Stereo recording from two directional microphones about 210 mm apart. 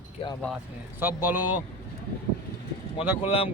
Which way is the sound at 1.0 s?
10° right (ahead or behind).